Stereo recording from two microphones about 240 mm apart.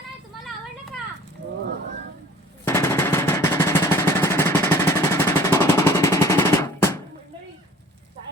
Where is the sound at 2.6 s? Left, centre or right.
Centre.